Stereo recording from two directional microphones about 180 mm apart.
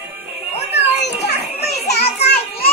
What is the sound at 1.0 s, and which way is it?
Children playing, 65° left (ahead or behind).